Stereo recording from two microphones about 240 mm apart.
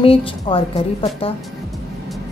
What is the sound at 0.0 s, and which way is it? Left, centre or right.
Speech, left.